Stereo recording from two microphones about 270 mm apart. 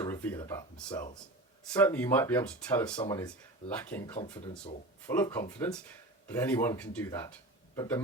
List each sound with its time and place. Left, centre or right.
0.0 s a sound: centre
1.7 s speech: centre
4.2 s speech: left
5.0 s speech: centre